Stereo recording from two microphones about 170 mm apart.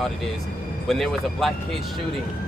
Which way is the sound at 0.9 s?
Centre (ahead or behind).